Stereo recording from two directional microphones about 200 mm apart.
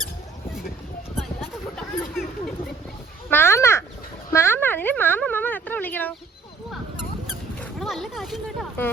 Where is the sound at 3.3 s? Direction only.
10° left (ahead or behind).